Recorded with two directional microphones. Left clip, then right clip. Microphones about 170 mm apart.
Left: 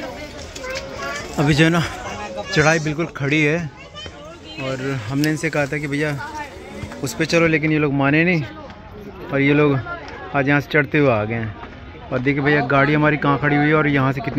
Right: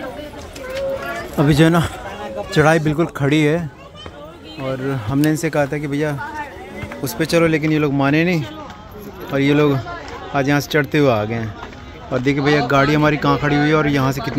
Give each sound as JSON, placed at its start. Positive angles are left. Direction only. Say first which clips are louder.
{"t": 1.3, "sound": "speech", "louder": "right 2 dB", "side_deg": -15}
{"t": 4.8, "sound": "speech", "louder": "right 4 dB", "side_deg": -15}